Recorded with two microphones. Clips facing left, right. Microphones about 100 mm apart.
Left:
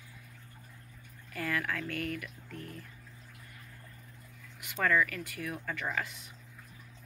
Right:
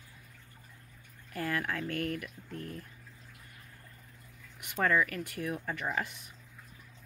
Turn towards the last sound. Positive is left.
turn(degrees=-20)  # may be behind; listen again after turning